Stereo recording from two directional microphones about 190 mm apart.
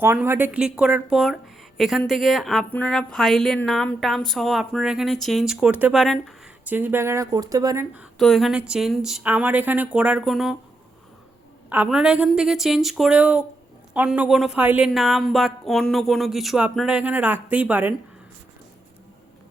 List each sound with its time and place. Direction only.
0.0 s a woman's voice: 10° right (ahead or behind)
7.9 s a woman's voice: centre (ahead or behind)
11.7 s a woman's voice: 5° right (ahead or behind)